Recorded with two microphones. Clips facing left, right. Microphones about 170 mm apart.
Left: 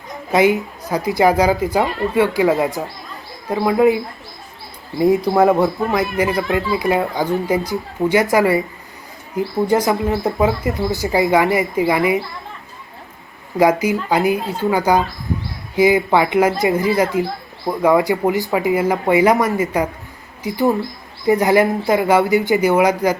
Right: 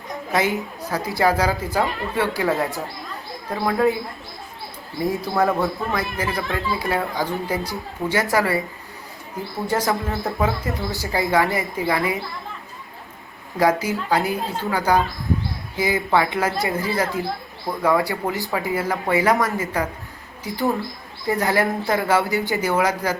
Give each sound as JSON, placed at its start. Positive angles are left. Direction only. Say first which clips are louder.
{"t": 0.3, "sound": "speech", "louder": "left 7 dB", "side_deg": 15}
{"t": 4.9, "sound": "speech", "louder": "left 8 dB", "side_deg": 20}
{"t": 9.6, "sound": "speech", "louder": "left 5 dB", "side_deg": 15}
{"t": 9.9, "sound": "speech", "louder": "left 6 dB", "side_deg": 0}
{"t": 10.2, "sound": "speech", "louder": "left 4 dB", "side_deg": 20}
{"t": 13.6, "sound": "speech", "louder": "left 5 dB", "side_deg": 15}
{"t": 21.2, "sound": "speech", "louder": "left 7 dB", "side_deg": 20}